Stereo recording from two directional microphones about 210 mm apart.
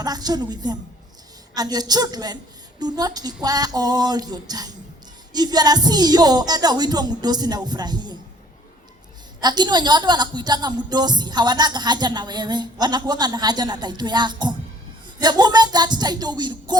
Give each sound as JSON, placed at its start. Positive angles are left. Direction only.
{"t": 0.0, "sound": "a woman's voice", "side_deg": -20}
{"t": 9.4, "sound": "a woman's voice", "side_deg": -20}